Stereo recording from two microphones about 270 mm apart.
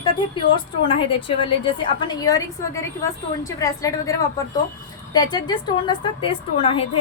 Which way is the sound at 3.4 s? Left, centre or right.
Centre.